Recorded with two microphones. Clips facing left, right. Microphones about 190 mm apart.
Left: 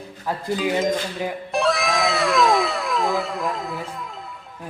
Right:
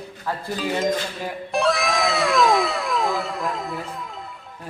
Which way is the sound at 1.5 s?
Centre (ahead or behind).